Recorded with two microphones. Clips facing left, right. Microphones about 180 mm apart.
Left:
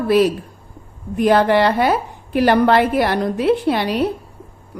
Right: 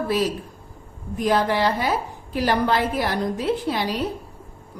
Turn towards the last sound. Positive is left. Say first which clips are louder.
# left 6 dB
turn(degrees=65)  # may be behind; listen again after turning